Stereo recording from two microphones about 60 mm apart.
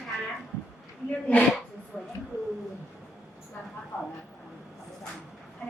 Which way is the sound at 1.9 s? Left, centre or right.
Centre.